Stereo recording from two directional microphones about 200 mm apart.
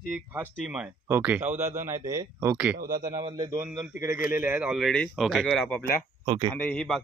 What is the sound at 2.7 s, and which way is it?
Speech, 45° right (ahead or behind).